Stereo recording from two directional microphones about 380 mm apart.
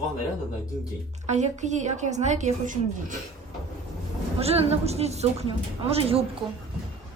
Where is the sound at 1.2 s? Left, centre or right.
Centre.